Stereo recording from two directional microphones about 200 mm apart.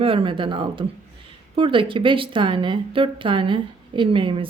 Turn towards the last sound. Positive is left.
turn(degrees=-25)  # may be behind; listen again after turning